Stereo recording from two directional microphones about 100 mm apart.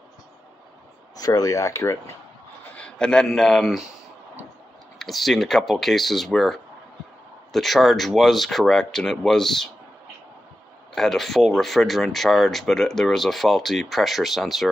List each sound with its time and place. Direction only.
1.1 s speech: 40° left (ahead or behind)
2.7 s speech: 10° left (ahead or behind)
4.9 s speech: centre (ahead or behind)
11.0 s speech: centre (ahead or behind)